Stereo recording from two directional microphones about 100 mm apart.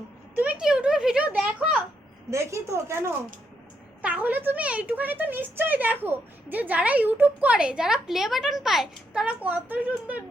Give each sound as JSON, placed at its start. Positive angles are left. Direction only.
{"t": 0.3, "sound": "speech", "side_deg": -10}
{"t": 2.3, "sound": "a woman's voice", "side_deg": -30}
{"t": 4.0, "sound": "speech", "side_deg": -15}